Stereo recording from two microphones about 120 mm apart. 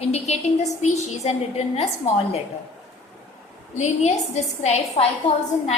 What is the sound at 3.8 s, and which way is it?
A woman's voice, 70° left (ahead or behind).